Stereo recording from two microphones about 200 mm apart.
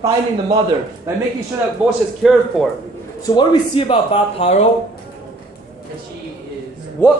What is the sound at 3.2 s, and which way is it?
A man's voice, 20° left (ahead or behind).